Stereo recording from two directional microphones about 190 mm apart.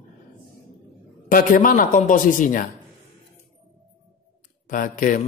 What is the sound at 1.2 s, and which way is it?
A man's voice, 45° left (ahead or behind).